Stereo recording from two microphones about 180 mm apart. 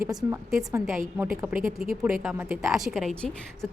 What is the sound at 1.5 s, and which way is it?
Speech, 50° right (ahead or behind).